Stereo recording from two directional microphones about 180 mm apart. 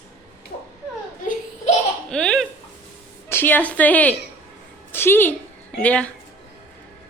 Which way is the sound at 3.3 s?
10° left (ahead or behind).